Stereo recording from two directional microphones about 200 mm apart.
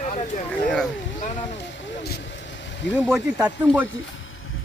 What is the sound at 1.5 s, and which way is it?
Vehicle, 65° left (ahead or behind).